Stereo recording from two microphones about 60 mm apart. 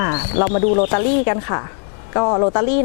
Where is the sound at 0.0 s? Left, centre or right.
Centre.